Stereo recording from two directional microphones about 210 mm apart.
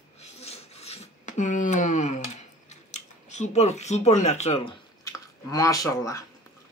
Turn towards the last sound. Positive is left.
turn(degrees=15)  # may be behind; listen again after turning